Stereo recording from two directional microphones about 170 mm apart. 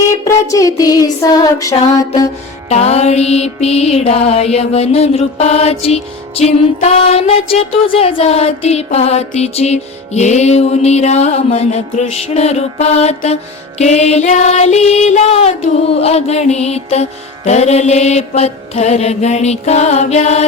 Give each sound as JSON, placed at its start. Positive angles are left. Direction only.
{"t": 0.3, "sound": "music", "side_deg": 20}
{"t": 2.6, "sound": "music", "side_deg": 40}